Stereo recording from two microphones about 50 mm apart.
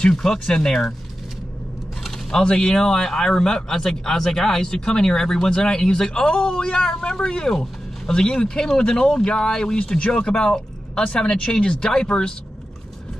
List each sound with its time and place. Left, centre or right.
0.0 s speech: centre
2.4 s speech: centre